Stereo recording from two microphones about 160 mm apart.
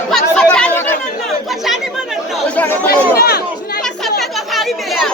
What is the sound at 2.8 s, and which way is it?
Speech, 80° left.